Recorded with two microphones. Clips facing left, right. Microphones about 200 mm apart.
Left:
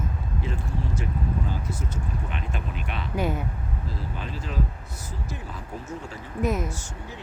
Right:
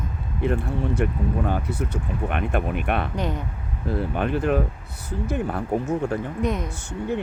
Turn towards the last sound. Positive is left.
turn(degrees=-60)  # may be behind; listen again after turning